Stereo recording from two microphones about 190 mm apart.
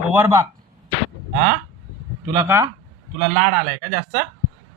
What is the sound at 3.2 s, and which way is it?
Speech, 40° right (ahead or behind).